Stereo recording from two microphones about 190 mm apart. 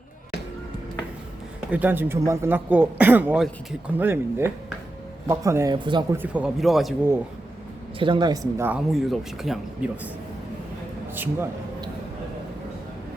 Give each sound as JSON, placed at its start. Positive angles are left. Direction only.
{"t": 1.7, "sound": "speech", "side_deg": -10}
{"t": 6.1, "sound": "speech", "side_deg": -5}
{"t": 7.9, "sound": "speech", "side_deg": -25}
{"t": 8.9, "sound": "speech", "side_deg": 0}
{"t": 11.1, "sound": "a man's voice", "side_deg": -10}